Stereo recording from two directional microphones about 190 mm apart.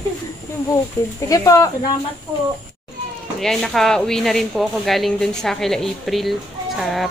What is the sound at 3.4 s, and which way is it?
Speech, centre (ahead or behind).